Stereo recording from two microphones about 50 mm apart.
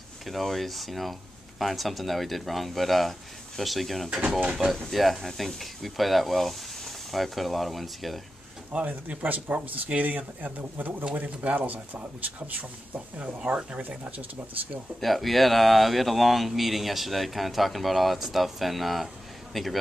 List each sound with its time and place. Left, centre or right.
0.3 s speech: centre
4.4 s speech: right
4.8 s speech: centre
8.7 s speech: right
15.0 s speech: centre